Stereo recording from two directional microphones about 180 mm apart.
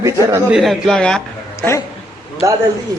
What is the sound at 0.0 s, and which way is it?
Speech, 20° right (ahead or behind).